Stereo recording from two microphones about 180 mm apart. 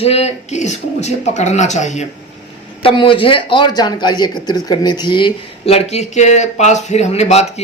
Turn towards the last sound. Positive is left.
turn(degrees=35)  # may be behind; listen again after turning